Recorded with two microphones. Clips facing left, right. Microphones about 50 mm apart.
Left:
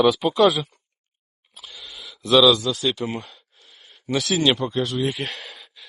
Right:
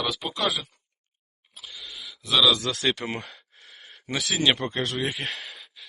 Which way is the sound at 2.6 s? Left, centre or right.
Right.